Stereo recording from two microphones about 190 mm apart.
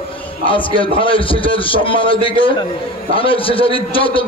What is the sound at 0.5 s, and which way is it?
A man's voice, 25° left (ahead or behind).